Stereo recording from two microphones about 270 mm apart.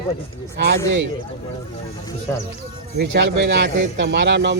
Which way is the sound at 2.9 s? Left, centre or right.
Right.